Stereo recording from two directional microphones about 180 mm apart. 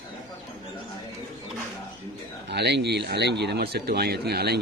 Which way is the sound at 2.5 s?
70° right (ahead or behind).